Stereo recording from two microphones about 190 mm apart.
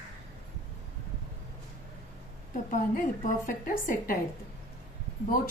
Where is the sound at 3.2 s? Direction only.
45° left (ahead or behind).